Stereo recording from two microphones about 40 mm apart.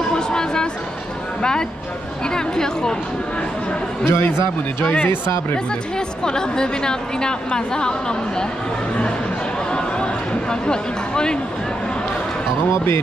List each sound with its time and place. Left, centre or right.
0.1 s a sound: centre
1.4 s a woman's voice: centre
4.0 s a man's voice: left
5.0 s speech: left
5.9 s a woman's voice: centre
9.7 s a sound: left
10.5 s a woman's voice: centre